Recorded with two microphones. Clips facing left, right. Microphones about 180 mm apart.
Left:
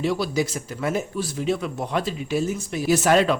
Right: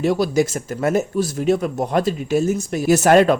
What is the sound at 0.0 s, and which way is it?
Speech, 45° right (ahead or behind).